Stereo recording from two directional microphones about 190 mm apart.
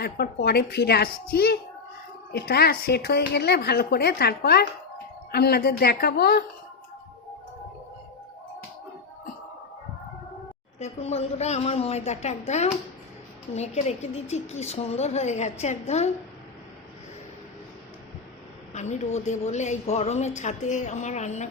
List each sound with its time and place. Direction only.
0.0 s speech: 55° left (ahead or behind)
10.8 s a woman's voice: 35° left (ahead or behind)
18.7 s a woman's voice: 40° left (ahead or behind)